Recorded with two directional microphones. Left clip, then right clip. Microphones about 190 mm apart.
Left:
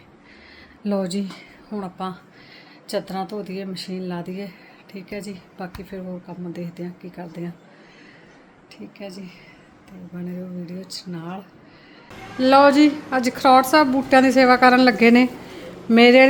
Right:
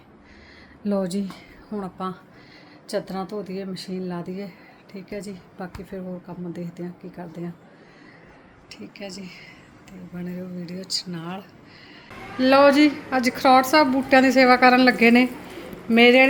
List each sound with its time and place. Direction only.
0.9 s speech: centre (ahead or behind)
8.7 s a woman's voice: 5° left (ahead or behind)